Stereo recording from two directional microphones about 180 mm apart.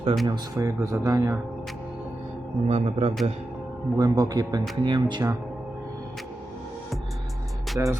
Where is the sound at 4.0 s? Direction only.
20° right (ahead or behind).